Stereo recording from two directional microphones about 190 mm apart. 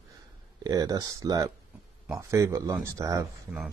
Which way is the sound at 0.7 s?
20° right (ahead or behind).